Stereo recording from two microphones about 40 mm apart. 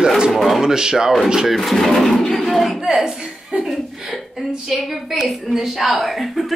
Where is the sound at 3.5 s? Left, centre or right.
Right.